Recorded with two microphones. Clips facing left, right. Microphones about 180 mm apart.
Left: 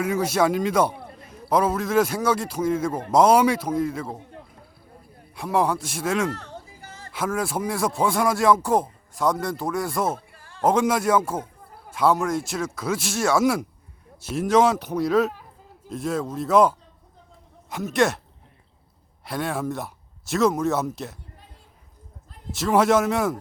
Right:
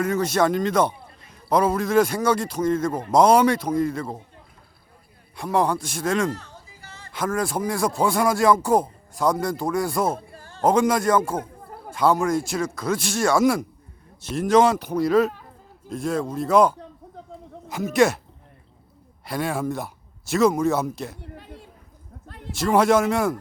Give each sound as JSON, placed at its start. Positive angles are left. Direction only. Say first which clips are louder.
{"t": 0.0, "sound": "speech", "louder": "right 1 dB", "side_deg": 10}
{"t": 5.4, "sound": "speech", "louder": "right 1 dB", "side_deg": 5}
{"t": 6.3, "sound": "a sound", "louder": "left 1 dB", "side_deg": 60}
{"t": 7.1, "sound": "speech", "louder": "right 1 dB", "side_deg": 5}
{"t": 10.2, "sound": "a sound", "louder": "right 7 dB", "side_deg": -35}
{"t": 10.6, "sound": "speech", "louder": "right 1 dB", "side_deg": 0}
{"t": 19.2, "sound": "speech", "louder": "right 1 dB", "side_deg": 0}
{"t": 21.2, "sound": "a sound", "louder": "right 10 dB", "side_deg": -70}
{"t": 22.5, "sound": "speech", "louder": "right 1 dB", "side_deg": 0}